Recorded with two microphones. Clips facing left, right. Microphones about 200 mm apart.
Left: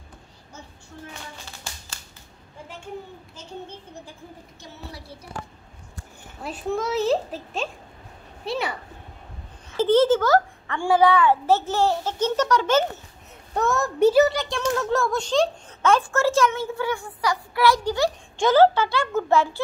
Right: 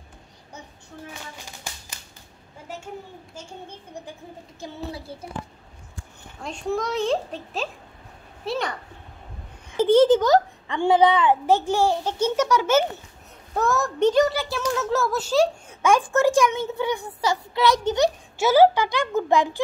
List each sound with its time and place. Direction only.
4.9 s child singing: 25° right (ahead or behind)
6.4 s a child's voice: 5° left (ahead or behind)
9.7 s a child's voice: 15° right (ahead or behind); by 14.3 s 5° left (ahead or behind)
14.3 s speech: 5° right (ahead or behind); by 18.1 s 20° right (ahead or behind)
18.4 s speech: 10° right (ahead or behind)